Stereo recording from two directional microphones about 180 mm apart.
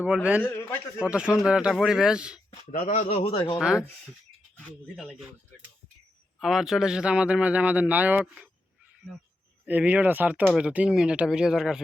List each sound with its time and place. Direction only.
0.0 s speech: 10° right (ahead or behind)
0.4 s a man's voice: 10° left (ahead or behind)
1.1 s speech: 5° right (ahead or behind)
2.7 s a man's voice: 45° left (ahead or behind)
3.1 s speech: 30° left (ahead or behind)
3.6 s speech: 5° right (ahead or behind)
6.4 s speech: centre (ahead or behind)
9.6 s speech: 10° right (ahead or behind)